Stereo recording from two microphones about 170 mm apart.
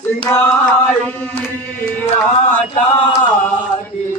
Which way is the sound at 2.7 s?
35° left (ahead or behind).